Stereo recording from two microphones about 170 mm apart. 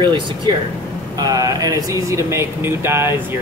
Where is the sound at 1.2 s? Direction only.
20° right (ahead or behind).